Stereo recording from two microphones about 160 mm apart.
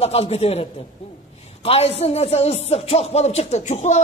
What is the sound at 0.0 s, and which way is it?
A man's voice, 40° left (ahead or behind).